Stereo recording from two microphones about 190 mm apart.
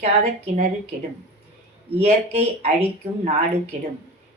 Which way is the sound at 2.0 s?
35° right (ahead or behind).